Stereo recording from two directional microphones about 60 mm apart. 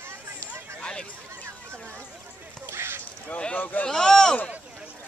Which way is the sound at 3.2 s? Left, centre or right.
Left.